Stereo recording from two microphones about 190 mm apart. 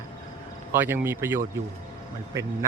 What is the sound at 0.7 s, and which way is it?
Speech, 10° right (ahead or behind).